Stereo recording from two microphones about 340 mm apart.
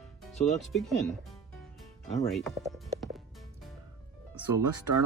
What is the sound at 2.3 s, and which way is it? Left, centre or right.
Speech, centre.